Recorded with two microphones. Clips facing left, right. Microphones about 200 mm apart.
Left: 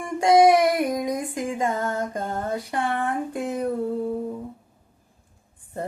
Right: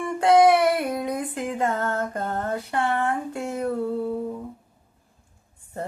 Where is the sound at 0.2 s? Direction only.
10° left (ahead or behind).